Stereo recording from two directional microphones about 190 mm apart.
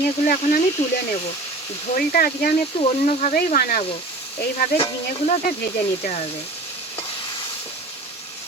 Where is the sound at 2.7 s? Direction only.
35° left (ahead or behind).